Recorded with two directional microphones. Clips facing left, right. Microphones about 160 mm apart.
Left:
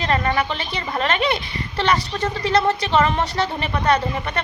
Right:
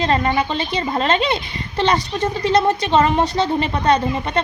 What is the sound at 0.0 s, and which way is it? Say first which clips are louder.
A woman's voice: right 3 dB; 25° right (ahead or behind).